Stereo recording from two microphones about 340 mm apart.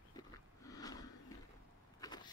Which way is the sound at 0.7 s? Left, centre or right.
Centre.